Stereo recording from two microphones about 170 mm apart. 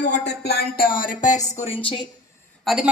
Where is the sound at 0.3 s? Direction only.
70° left (ahead or behind).